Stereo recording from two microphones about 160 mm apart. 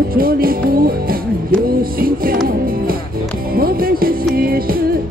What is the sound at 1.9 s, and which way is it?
Music, 65° right (ahead or behind).